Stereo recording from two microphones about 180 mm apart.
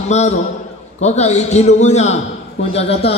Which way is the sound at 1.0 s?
40° left (ahead or behind).